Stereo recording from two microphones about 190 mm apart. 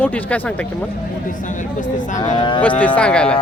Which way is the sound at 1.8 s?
40° left (ahead or behind).